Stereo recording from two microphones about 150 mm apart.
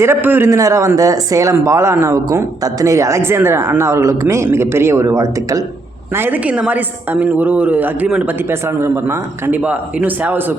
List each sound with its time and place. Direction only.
0.0 s a man's voice: 15° right (ahead or behind)